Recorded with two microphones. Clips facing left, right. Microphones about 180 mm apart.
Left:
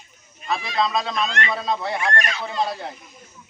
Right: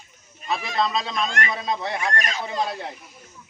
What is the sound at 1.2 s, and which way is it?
Speech, 50° right (ahead or behind).